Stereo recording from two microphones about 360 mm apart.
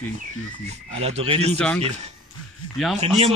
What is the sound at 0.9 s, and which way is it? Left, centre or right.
Speech, centre.